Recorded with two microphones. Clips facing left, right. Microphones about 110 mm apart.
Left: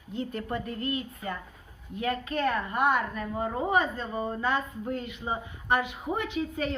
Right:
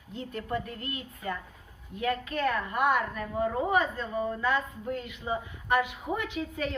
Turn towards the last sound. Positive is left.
turn(degrees=35)  # may be behind; listen again after turning